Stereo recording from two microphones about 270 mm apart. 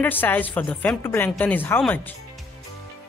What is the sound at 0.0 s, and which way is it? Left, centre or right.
Speech, centre.